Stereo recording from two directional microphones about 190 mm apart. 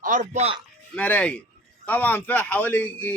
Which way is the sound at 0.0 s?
45° right (ahead or behind).